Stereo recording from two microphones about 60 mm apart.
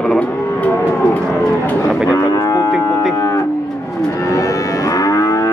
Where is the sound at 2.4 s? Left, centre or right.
Left.